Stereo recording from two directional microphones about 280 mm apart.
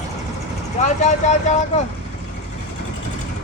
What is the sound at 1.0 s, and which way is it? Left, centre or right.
Speech, left.